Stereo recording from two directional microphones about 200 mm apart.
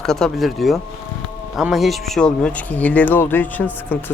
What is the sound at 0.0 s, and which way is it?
Speech, centre (ahead or behind).